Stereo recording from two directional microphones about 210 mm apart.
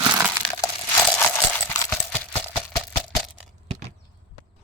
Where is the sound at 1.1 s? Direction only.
10° left (ahead or behind).